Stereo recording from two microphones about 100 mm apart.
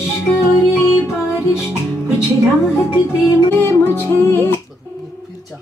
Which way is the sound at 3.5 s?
25° left (ahead or behind).